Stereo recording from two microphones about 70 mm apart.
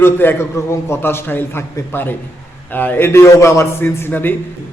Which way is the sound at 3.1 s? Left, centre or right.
Left.